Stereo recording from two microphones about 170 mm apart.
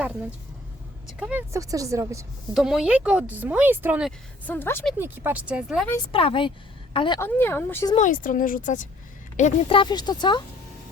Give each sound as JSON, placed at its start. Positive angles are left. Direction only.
{"t": 1.0, "sound": "speech", "side_deg": -5}
{"t": 1.5, "sound": "speech", "side_deg": -20}
{"t": 2.5, "sound": "speech", "side_deg": 0}
{"t": 4.4, "sound": "speech", "side_deg": 10}
{"t": 4.9, "sound": "speech", "side_deg": -10}
{"t": 6.1, "sound": "speech", "side_deg": 30}
{"t": 7.2, "sound": "speech", "side_deg": 15}
{"t": 7.9, "sound": "speech", "side_deg": 50}
{"t": 9.6, "sound": "speech", "side_deg": 30}